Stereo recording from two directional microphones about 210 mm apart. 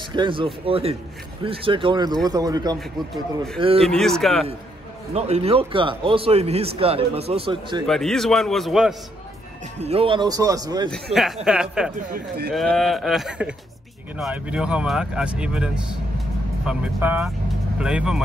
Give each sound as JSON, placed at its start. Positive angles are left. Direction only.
{"t": 0.1, "sound": "speech", "side_deg": -25}
{"t": 3.8, "sound": "speech", "side_deg": 0}
{"t": 5.1, "sound": "speech", "side_deg": -30}
{"t": 7.8, "sound": "speech", "side_deg": 0}
{"t": 9.8, "sound": "speech", "side_deg": -30}
{"t": 10.9, "sound": "speech", "side_deg": 0}
{"t": 11.9, "sound": "speech", "side_deg": -45}
{"t": 12.5, "sound": "speech", "side_deg": 0}